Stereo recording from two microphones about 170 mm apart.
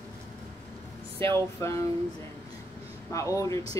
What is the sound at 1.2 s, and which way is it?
Speech, 30° right (ahead or behind).